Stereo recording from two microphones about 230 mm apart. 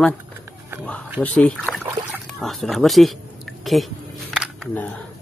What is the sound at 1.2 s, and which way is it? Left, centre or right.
Speech, centre.